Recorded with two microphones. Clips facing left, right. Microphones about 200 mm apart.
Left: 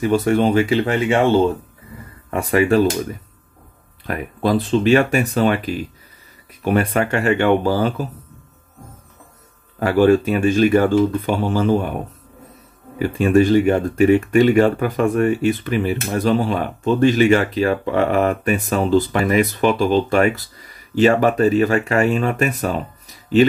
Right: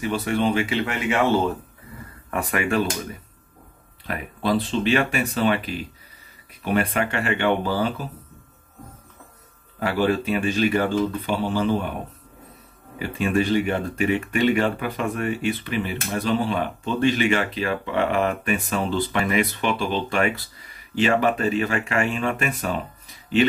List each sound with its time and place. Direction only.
0.0 s speech: 45° left (ahead or behind)
4.4 s speech: 45° left (ahead or behind)
9.8 s speech: 45° left (ahead or behind)
13.2 s speech: 45° left (ahead or behind)